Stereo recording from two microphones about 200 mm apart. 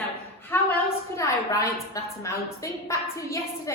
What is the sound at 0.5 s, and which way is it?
A woman's voice, 10° left (ahead or behind).